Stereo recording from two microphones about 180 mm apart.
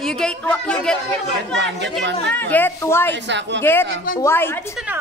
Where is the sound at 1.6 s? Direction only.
80° right.